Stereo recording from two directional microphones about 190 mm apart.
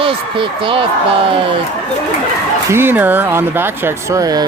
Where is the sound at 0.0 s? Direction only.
25° right (ahead or behind).